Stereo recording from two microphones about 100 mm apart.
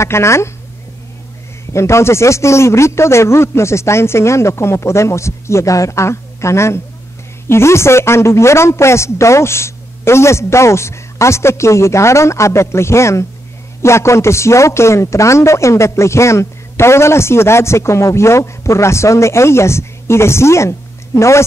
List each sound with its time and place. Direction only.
0.0 s a man's voice: 30° left (ahead or behind)
1.7 s a man's voice: 30° left (ahead or behind)